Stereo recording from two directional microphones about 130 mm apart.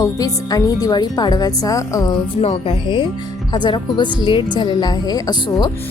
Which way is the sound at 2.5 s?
40° left (ahead or behind).